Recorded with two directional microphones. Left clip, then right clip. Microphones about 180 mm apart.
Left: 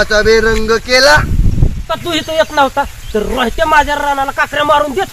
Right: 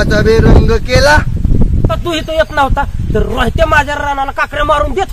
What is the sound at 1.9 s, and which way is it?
Speech, 20° right (ahead or behind).